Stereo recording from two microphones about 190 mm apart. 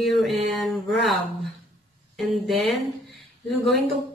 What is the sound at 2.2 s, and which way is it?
Mantra, centre (ahead or behind).